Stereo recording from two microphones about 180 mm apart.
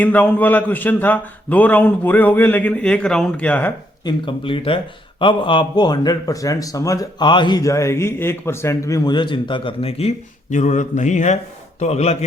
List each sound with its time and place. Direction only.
0.0 s a man's voice: 10° left (ahead or behind)
4.0 s a man's voice: 30° left (ahead or behind)